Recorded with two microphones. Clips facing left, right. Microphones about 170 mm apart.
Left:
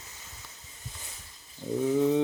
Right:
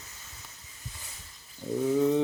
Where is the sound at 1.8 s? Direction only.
Centre (ahead or behind).